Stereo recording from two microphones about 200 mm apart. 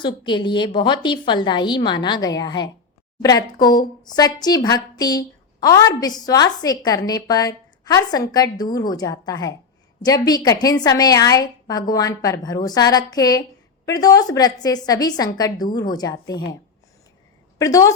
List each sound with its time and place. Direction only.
0.0 s speech: 25° left (ahead or behind)
17.6 s a woman's voice: 15° left (ahead or behind)